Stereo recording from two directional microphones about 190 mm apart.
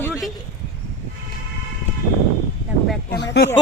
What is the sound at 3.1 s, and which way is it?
Speech, 60° left (ahead or behind).